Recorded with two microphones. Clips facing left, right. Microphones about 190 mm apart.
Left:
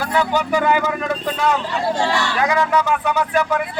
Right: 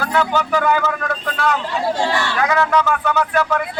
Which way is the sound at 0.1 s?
10° left (ahead or behind).